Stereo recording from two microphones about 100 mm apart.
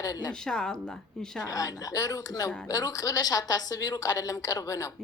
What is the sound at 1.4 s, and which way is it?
Speech, 35° left (ahead or behind).